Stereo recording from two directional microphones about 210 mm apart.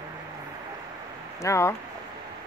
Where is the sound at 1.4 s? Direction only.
15° left (ahead or behind).